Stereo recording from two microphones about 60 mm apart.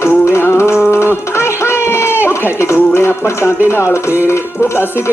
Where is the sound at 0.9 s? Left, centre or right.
Left.